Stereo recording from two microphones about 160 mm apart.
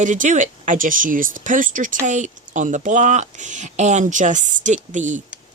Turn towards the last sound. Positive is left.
turn(degrees=-50)  # may be behind; listen again after turning